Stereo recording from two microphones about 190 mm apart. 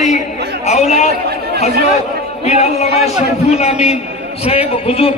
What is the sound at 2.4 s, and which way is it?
A man's voice, 35° left (ahead or behind).